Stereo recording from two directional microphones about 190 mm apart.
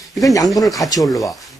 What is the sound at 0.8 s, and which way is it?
Speech, 20° left (ahead or behind).